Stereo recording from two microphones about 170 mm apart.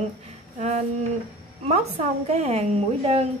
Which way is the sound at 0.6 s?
45° right (ahead or behind).